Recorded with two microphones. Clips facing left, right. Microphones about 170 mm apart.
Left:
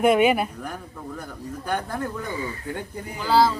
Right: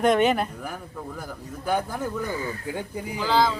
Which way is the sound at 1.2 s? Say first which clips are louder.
Even; 5° right (ahead or behind).